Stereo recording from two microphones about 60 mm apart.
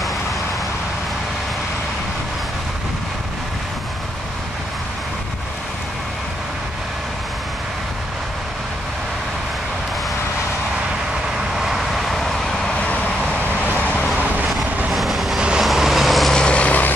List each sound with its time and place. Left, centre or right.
11.5 s vehicle: centre
12.7 s vehicle: left
13.7 s vehicle: left
14.9 s train: centre
15.6 s vehicle: centre; by 16.9 s left